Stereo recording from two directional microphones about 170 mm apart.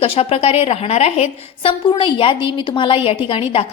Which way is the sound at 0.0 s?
35° left (ahead or behind).